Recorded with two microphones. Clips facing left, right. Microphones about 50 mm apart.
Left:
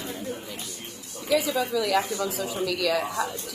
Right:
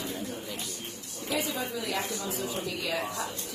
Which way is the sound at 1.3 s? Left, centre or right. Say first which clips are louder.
Left 8 dB; left.